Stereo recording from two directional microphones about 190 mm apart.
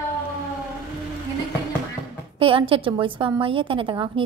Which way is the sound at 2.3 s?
30° right (ahead or behind).